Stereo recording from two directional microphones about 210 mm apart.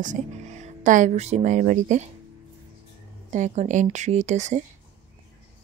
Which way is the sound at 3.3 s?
35° right (ahead or behind).